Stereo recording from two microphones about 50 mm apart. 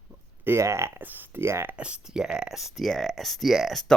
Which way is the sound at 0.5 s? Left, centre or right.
Right.